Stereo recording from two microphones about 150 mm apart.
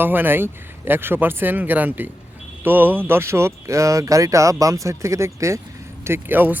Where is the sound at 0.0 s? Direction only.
15° right (ahead or behind).